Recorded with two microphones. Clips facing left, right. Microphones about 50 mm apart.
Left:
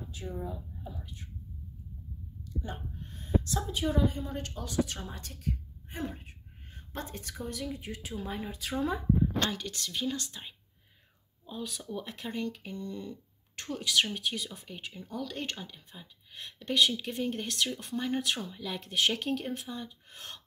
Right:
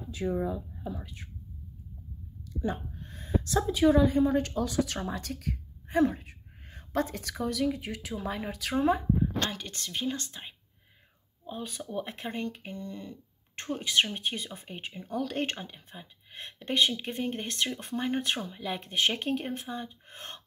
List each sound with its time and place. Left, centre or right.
0.1 s speech: right
2.6 s a woman's voice: right
9.7 s a woman's voice: right
15.1 s a woman's voice: right
15.5 s speech: right